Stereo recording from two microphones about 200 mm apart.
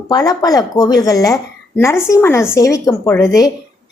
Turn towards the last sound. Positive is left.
turn(degrees=15)  # may be behind; listen again after turning